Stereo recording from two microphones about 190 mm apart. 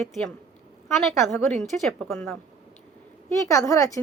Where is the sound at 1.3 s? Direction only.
5° left (ahead or behind).